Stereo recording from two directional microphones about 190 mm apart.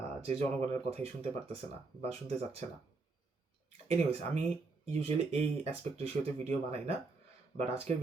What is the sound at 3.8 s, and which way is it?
Speech, 35° right (ahead or behind).